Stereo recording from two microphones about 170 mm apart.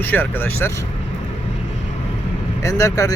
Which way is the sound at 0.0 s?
10° left (ahead or behind).